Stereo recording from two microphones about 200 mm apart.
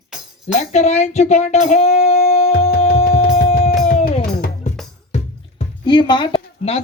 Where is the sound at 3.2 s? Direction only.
45° left (ahead or behind).